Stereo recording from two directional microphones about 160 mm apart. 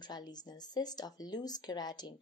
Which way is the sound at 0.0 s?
25° left (ahead or behind).